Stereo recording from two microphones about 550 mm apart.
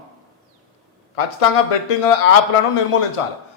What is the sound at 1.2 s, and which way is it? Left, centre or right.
Speech, left.